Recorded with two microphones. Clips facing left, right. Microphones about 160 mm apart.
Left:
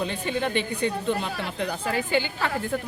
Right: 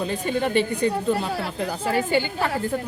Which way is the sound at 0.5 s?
40° right (ahead or behind).